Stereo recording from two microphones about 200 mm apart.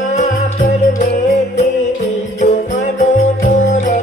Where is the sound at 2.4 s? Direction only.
35° left (ahead or behind).